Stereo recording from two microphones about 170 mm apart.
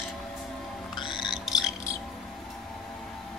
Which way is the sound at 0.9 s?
25° left (ahead or behind).